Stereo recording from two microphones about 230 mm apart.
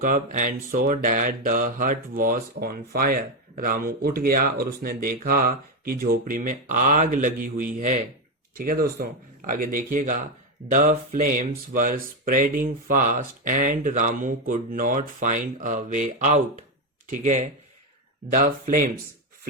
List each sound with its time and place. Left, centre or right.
0.0 s mantra: right